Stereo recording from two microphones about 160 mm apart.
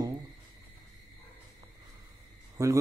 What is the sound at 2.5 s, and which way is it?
Speech, 20° right (ahead or behind).